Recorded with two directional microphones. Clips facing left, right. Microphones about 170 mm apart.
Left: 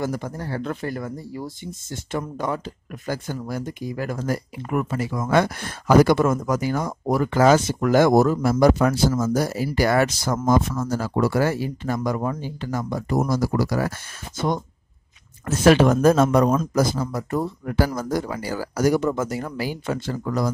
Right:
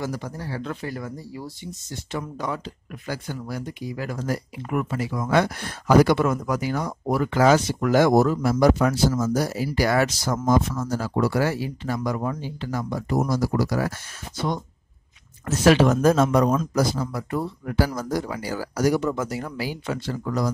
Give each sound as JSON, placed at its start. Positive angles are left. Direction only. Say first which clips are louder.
{"t": 0.0, "sound": "speech", "louder": "left 3 dB", "side_deg": 50}